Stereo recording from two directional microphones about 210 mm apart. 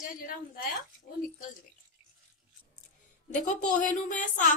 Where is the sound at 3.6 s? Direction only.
35° left (ahead or behind).